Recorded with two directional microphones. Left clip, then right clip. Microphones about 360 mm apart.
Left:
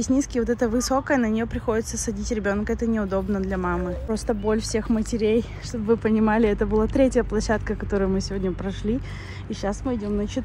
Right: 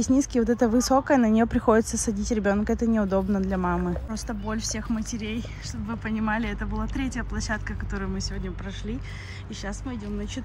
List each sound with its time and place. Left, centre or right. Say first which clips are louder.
0.0 s speech: even; centre
9.7 s speech: left 9 dB; centre